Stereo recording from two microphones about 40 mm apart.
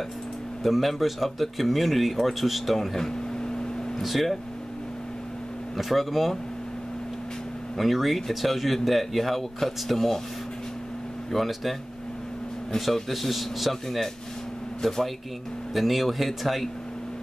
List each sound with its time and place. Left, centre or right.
0.7 s speech: centre
3.1 s a sound: centre
4.0 s speech: centre
5.8 s speech: centre
7.7 s speech: centre
11.3 s speech: centre
12.7 s speech: centre